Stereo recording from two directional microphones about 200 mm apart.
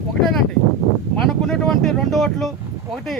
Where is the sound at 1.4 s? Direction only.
Centre (ahead or behind).